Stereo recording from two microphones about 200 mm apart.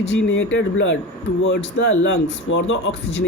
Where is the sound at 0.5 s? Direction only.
70° left (ahead or behind).